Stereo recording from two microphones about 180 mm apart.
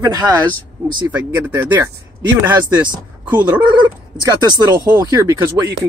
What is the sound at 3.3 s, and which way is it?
Speech, 10° right (ahead or behind).